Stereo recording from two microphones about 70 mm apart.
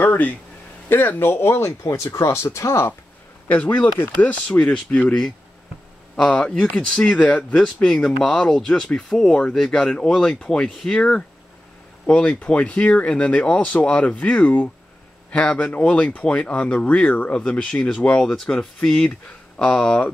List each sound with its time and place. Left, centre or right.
0.0 s a sound: left
0.8 s speech: left
3.4 s speech: left
6.1 s speech: centre